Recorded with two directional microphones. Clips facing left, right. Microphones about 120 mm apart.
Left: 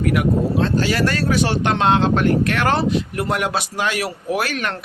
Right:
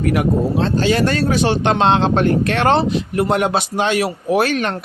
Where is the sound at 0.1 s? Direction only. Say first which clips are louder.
Right 2 dB; 30° right (ahead or behind).